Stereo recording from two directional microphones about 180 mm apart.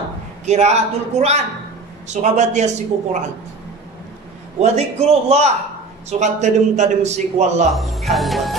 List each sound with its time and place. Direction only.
0.5 s a man's voice: 40° right (ahead or behind)
4.6 s a man's voice: 35° right (ahead or behind)
7.7 s speech: centre (ahead or behind)